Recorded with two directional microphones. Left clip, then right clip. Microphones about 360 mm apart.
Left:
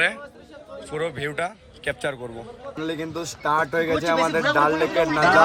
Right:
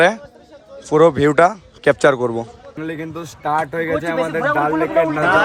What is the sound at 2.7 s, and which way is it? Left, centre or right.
Speech, centre.